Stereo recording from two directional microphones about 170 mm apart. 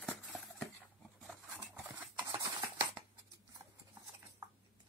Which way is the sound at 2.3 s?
20° right (ahead or behind).